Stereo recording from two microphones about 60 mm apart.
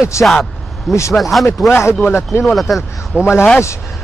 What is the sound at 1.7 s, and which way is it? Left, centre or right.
Speech, left.